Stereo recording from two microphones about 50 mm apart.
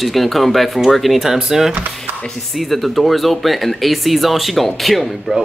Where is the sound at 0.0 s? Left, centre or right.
Centre.